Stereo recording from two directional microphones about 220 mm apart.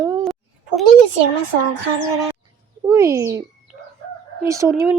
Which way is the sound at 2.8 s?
15° right (ahead or behind).